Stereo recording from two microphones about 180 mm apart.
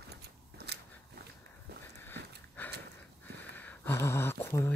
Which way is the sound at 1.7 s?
65° right (ahead or behind).